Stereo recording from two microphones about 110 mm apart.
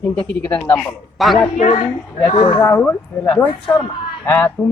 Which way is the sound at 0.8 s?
Centre (ahead or behind).